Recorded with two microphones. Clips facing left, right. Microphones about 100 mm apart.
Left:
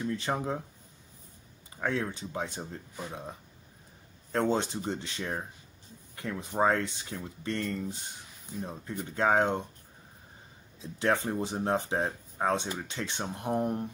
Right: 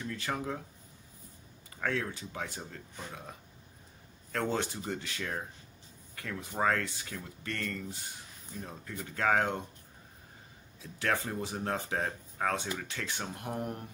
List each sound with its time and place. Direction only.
0.0 s speech: 25° left (ahead or behind)
1.8 s speech: 20° left (ahead or behind)
9.1 s speech: 25° left (ahead or behind)
10.8 s speech: 25° left (ahead or behind)